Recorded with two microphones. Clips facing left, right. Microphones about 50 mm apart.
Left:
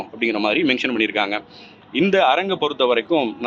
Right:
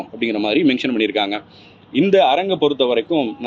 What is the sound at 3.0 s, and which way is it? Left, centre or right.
Speech, left.